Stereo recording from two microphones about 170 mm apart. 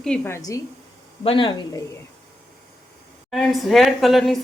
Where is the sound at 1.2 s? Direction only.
30° left (ahead or behind).